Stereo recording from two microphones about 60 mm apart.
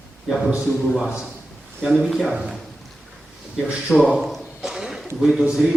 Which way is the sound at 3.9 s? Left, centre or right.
Centre.